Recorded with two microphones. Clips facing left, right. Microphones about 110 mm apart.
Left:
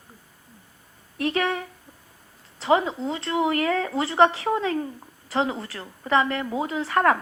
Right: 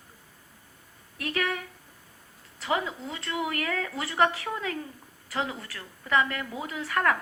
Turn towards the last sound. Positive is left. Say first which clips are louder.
# left 6 dB
turn(degrees=30)  # may be behind; listen again after turning